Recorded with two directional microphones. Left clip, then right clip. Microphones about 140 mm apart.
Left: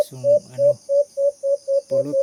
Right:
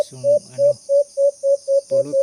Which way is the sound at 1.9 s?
10° left (ahead or behind).